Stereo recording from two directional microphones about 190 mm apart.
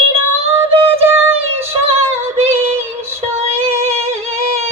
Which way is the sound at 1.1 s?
10° right (ahead or behind).